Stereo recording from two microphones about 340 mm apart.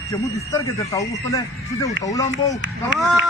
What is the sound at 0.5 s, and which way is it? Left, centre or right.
Speech, centre.